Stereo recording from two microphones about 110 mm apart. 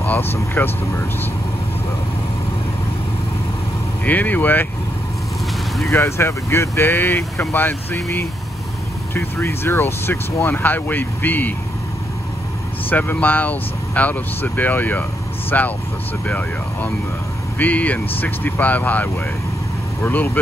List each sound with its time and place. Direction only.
0.0 s speech: 15° left (ahead or behind)
4.0 s speech: 15° left (ahead or behind)
5.9 s speech: 25° left (ahead or behind)
12.9 s speech: 15° left (ahead or behind)